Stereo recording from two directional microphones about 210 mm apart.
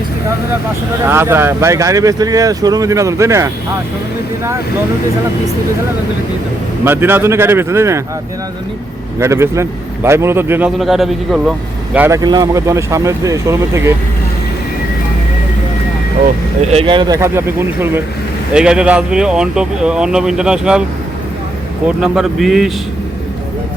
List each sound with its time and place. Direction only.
1.0 s speech: 10° right (ahead or behind)
6.8 s speech: 10° right (ahead or behind)
9.1 s speech: 10° right (ahead or behind)
11.9 s speech: 15° right (ahead or behind)
16.6 s speech: 25° right (ahead or behind); by 20.8 s 5° right (ahead or behind)
21.8 s speech: 5° right (ahead or behind)